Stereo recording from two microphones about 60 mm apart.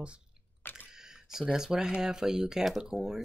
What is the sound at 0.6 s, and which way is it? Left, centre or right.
Camera, left.